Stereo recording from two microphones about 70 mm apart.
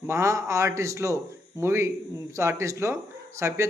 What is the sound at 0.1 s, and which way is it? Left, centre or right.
Speech, right.